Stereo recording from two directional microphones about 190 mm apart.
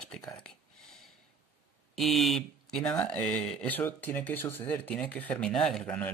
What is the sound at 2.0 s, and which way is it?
Speech, centre (ahead or behind).